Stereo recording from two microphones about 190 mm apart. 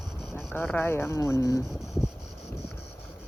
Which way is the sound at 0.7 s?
10° left (ahead or behind).